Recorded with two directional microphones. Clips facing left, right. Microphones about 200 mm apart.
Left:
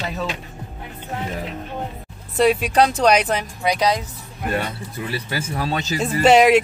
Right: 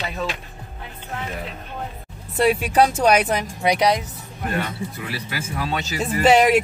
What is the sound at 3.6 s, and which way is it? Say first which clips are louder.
Speech: right 1 dB; 20° right (ahead or behind).